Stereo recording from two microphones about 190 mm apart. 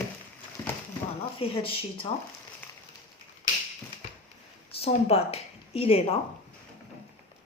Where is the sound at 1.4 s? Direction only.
30° left (ahead or behind).